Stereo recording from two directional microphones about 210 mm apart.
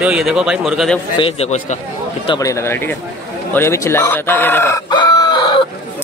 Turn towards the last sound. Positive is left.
turn(degrees=20)  # may be behind; listen again after turning